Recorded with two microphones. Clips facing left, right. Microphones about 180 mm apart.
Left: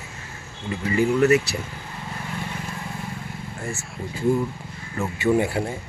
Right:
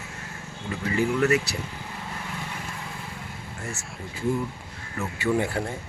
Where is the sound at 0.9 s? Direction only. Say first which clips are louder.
Left 4 dB; 25° left (ahead or behind).